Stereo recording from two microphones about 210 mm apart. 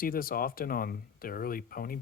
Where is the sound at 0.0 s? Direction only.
45° left (ahead or behind).